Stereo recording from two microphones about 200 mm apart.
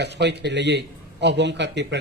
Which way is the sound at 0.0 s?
60° right (ahead or behind).